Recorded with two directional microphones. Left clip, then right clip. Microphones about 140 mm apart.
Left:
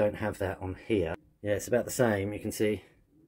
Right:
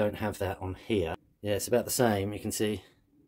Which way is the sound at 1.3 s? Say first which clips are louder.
Even; 20° right (ahead or behind).